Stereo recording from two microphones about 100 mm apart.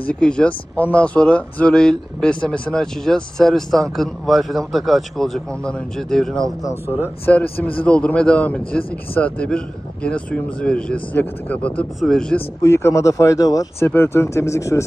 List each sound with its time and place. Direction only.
0.0 s speech: 10° left (ahead or behind)
7.3 s speech: 15° left (ahead or behind)
12.4 s speech: 25° left (ahead or behind)
13.7 s speech: 25° left (ahead or behind)